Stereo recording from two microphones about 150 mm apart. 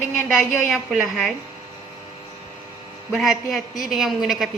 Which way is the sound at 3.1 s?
Centre (ahead or behind).